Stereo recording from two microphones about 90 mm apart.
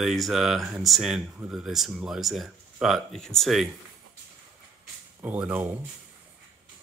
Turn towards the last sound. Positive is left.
turn(degrees=-15)  # may be behind; listen again after turning